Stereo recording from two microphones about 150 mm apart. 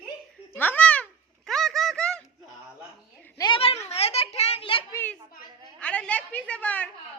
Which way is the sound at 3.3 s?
30° left (ahead or behind).